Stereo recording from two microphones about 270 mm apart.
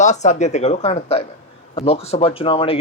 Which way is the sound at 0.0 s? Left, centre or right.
Left.